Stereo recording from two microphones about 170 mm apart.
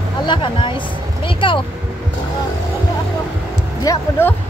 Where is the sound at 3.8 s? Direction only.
15° left (ahead or behind).